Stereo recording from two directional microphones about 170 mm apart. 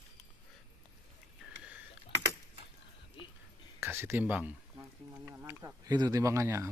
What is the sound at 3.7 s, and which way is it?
Speech, 15° right (ahead or behind).